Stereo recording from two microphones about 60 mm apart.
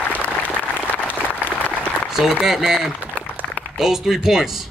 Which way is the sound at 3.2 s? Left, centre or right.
Left.